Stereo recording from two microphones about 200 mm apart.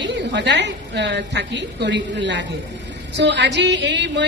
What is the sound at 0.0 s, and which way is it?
A woman's voice, 60° right (ahead or behind).